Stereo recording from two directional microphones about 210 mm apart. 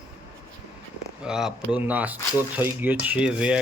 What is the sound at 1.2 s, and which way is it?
Speech, 5° right (ahead or behind).